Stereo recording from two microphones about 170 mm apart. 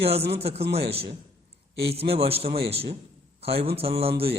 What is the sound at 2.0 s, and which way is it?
Speech, 35° right (ahead or behind).